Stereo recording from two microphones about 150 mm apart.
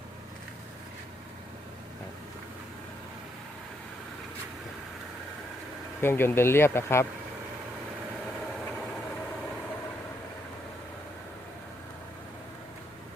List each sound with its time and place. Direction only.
6.0 s speech: 15° left (ahead or behind)